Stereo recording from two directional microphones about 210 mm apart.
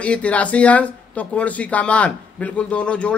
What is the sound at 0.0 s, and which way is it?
A man's voice, 5° left (ahead or behind).